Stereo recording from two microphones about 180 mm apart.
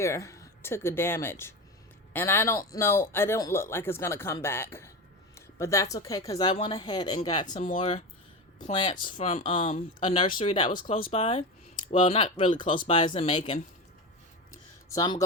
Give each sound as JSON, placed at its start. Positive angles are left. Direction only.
{"t": 0.0, "sound": "speech", "side_deg": 15}
{"t": 7.5, "sound": "speech", "side_deg": 45}
{"t": 14.8, "sound": "speech", "side_deg": 25}